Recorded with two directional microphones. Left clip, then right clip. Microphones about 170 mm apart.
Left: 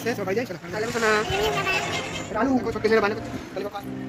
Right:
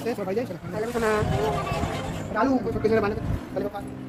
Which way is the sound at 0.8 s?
15° right (ahead or behind).